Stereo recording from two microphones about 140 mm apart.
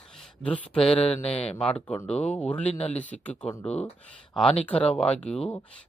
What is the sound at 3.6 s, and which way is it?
Speech, 50° left (ahead or behind).